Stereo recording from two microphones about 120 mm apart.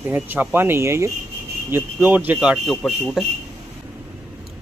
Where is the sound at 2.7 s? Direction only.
5° left (ahead or behind).